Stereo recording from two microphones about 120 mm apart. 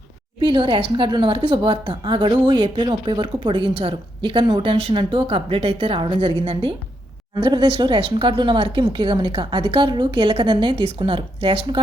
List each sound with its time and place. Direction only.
0.4 s a woman's voice: 40° right (ahead or behind)